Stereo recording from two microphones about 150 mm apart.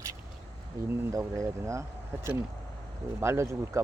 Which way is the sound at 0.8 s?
20° right (ahead or behind).